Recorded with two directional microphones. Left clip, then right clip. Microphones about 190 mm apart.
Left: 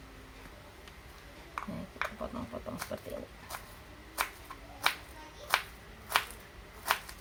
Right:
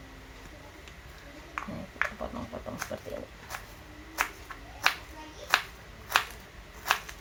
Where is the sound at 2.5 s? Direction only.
5° left (ahead or behind).